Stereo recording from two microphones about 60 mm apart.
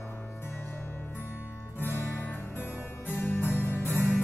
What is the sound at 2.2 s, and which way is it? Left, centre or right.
Music, left.